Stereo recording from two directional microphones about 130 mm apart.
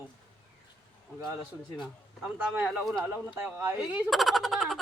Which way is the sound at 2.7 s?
5° left (ahead or behind).